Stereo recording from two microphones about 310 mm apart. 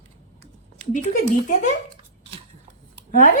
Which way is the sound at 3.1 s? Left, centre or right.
Left.